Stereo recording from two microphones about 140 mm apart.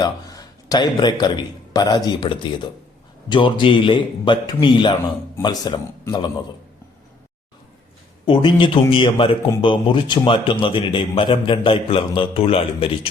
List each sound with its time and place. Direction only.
0.0 s a man's voice: 25° left (ahead or behind)
8.2 s a man's voice: 35° left (ahead or behind)